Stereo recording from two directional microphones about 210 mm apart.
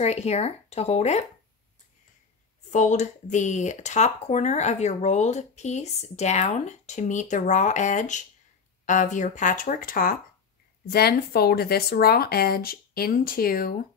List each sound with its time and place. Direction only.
0.0 s speech: 30° left (ahead or behind)
2.7 s speech: 35° left (ahead or behind)